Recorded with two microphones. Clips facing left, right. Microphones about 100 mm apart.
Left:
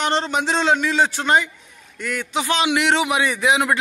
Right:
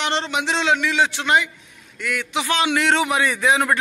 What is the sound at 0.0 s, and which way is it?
A man's voice, 40° left (ahead or behind).